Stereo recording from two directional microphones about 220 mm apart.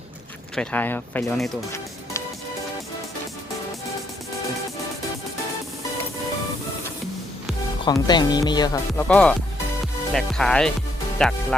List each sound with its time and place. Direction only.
0.5 s speech: 5° left (ahead or behind)
7.9 s speech: 20° left (ahead or behind)
9.0 s speech: 5° left (ahead or behind)